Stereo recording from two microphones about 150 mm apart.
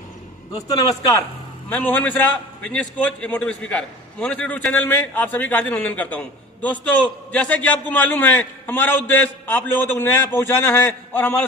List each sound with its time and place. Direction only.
0.7 s a man's voice: 25° left (ahead or behind)
1.7 s a man's voice: 10° left (ahead or behind)